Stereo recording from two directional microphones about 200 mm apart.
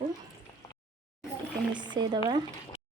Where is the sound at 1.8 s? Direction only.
20° right (ahead or behind).